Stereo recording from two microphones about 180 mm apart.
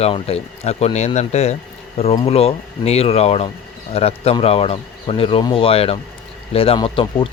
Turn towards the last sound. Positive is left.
turn(degrees=30)  # may be behind; listen again after turning